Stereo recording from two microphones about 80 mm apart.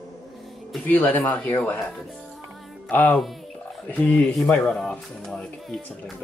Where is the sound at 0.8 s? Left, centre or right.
Left.